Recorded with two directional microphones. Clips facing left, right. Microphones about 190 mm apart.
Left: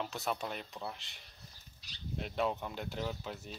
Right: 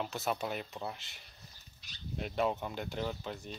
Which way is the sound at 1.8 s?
35° left (ahead or behind).